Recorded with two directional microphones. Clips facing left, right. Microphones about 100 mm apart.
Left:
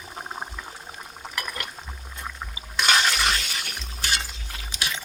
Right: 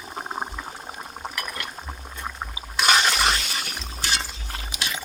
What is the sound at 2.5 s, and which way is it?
Water, 20° right (ahead or behind).